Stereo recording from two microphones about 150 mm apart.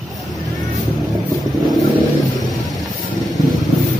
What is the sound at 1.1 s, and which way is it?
Vehicle, centre (ahead or behind).